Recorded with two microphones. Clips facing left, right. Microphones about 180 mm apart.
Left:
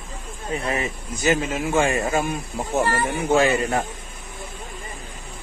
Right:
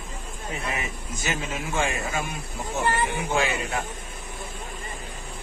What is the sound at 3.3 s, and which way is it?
Speech, 50° left (ahead or behind).